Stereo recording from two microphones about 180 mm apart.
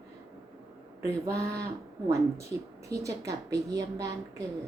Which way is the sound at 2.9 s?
20° right (ahead or behind).